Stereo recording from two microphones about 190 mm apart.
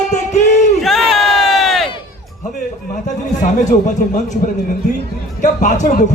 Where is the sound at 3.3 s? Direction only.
40° left (ahead or behind).